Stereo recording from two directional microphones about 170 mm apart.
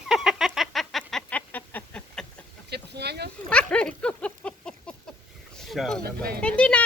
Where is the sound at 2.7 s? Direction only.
75° right (ahead or behind).